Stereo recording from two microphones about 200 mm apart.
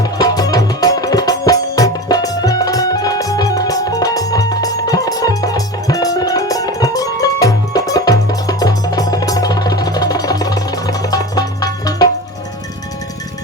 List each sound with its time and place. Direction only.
0.0 s music: 20° left (ahead or behind)